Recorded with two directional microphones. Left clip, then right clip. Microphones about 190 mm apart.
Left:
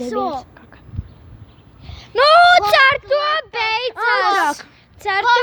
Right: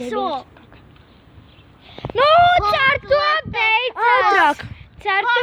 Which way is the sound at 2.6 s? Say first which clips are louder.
Left 4 dB; 40° left (ahead or behind).